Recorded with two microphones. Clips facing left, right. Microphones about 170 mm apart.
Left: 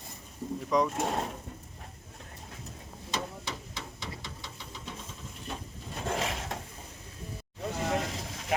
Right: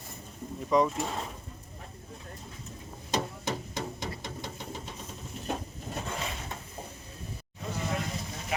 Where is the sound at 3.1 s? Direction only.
45° right (ahead or behind).